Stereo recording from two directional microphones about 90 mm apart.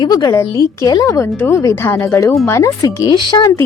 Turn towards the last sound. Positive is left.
turn(degrees=55)  # may be behind; listen again after turning